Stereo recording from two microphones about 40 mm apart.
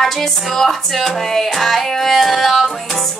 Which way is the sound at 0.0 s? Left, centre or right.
Centre.